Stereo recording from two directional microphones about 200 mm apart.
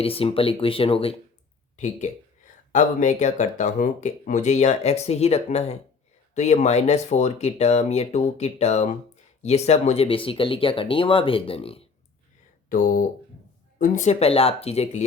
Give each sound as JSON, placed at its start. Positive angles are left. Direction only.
{"t": 0.0, "sound": "speech", "side_deg": 30}
{"t": 12.6, "sound": "speech", "side_deg": 40}